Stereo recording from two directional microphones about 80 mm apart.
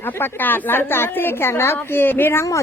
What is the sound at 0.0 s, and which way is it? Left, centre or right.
Speech, left.